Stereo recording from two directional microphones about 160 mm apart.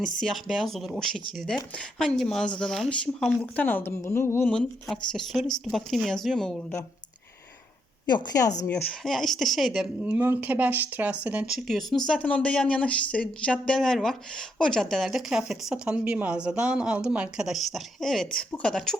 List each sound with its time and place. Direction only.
0.0 s speech: centre (ahead or behind)
4.5 s speech: centre (ahead or behind)
8.0 s a woman's voice: 25° left (ahead or behind)
8.6 s speech: 10° left (ahead or behind)